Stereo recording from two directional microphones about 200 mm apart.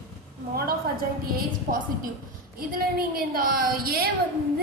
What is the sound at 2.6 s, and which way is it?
A woman's voice, 50° right (ahead or behind).